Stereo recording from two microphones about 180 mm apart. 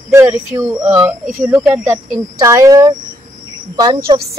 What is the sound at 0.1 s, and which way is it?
A woman's voice, 15° right (ahead or behind).